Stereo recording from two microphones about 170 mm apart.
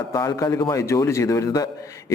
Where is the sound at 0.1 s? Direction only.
20° left (ahead or behind).